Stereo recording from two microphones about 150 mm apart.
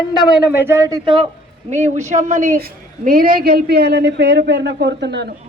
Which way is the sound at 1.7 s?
50° right (ahead or behind).